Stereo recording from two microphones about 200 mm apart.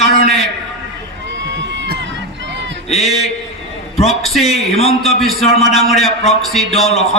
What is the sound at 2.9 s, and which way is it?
A man's voice, centre (ahead or behind).